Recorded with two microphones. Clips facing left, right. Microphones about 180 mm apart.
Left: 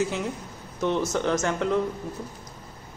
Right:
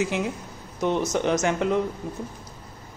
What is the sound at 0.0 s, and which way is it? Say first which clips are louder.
Speech: right 1 dB; 15° right (ahead or behind).